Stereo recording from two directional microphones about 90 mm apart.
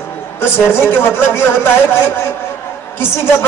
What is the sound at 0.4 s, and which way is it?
A man's voice, 25° left (ahead or behind).